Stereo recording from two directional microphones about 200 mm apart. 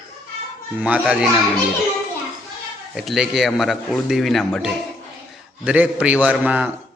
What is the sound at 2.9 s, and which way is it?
A man's voice, centre (ahead or behind).